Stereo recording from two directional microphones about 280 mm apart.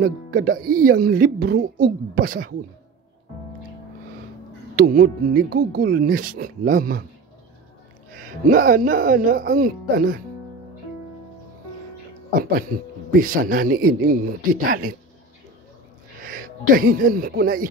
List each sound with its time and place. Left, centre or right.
0.0 s speech: right
4.7 s speech: right
8.5 s speech: right
12.4 s speech: right
16.3 s speech: right